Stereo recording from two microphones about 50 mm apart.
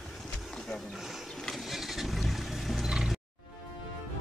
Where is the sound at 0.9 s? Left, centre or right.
Centre.